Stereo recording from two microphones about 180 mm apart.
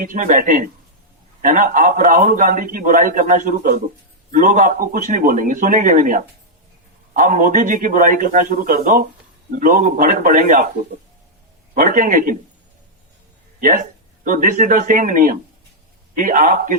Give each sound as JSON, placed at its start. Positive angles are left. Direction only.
{"t": 0.0, "sound": "a man's voice", "side_deg": -50}
{"t": 11.7, "sound": "a man's voice", "side_deg": -45}
{"t": 13.6, "sound": "a man's voice", "side_deg": -45}